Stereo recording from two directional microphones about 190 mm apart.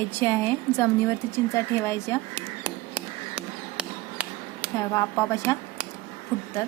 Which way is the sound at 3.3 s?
5° right (ahead or behind).